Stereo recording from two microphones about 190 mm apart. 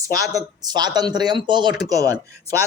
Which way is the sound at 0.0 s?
15° right (ahead or behind).